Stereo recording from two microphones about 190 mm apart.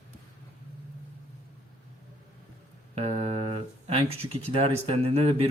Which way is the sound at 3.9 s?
30° right (ahead or behind).